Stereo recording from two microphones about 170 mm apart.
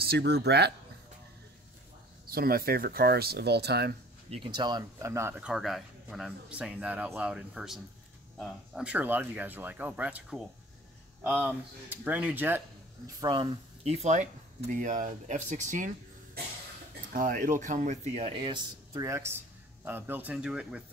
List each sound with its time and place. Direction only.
0.0 s speech: 75° right (ahead or behind)
2.2 s speech: 60° right (ahead or behind)
4.3 s speech: 30° right (ahead or behind)
14.7 s speech: 50° right (ahead or behind)
17.1 s speech: 55° right (ahead or behind); by 18.6 s 30° right (ahead or behind)
18.9 s a man's voice: 20° right (ahead or behind)